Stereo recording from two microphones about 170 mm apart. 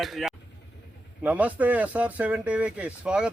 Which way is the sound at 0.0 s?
Centre (ahead or behind).